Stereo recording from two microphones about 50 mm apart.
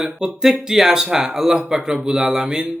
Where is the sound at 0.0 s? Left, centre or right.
Centre.